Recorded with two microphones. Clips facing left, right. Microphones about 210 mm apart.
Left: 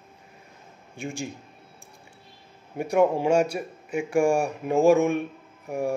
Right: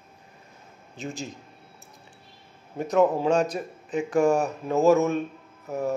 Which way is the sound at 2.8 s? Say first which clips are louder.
Even; 10° left (ahead or behind).